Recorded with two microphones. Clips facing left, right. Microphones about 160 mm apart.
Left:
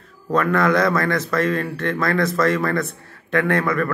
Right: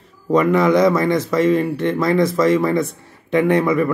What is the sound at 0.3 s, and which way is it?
A man's voice, 15° right (ahead or behind).